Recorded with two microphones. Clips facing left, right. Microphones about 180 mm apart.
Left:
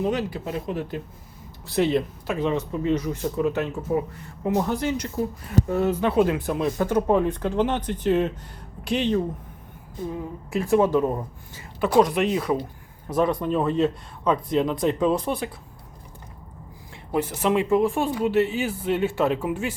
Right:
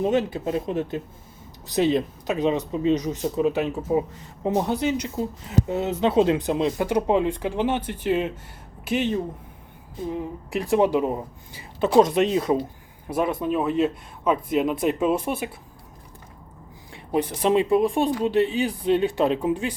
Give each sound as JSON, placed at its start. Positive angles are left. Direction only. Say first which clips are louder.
{"t": 0.0, "sound": "speech", "louder": "right 3 dB", "side_deg": -25}
{"t": 10.1, "sound": "speech", "louder": "right 2 dB", "side_deg": -20}
{"t": 13.1, "sound": "speech", "louder": "left 1 dB", "side_deg": -10}
{"t": 16.9, "sound": "speech", "louder": "right 1 dB", "side_deg": -15}